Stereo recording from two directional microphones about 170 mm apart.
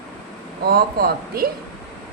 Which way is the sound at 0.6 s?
60° right (ahead or behind).